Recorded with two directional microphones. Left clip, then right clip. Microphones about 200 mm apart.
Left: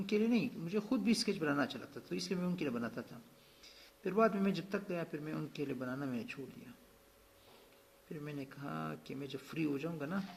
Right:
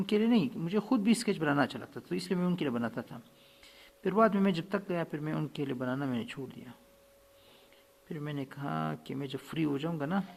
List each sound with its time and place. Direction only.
0.0 s speech: 40° right (ahead or behind)
8.1 s speech: 40° right (ahead or behind)